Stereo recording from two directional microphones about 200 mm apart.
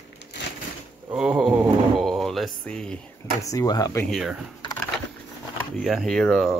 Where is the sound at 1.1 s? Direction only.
5° right (ahead or behind).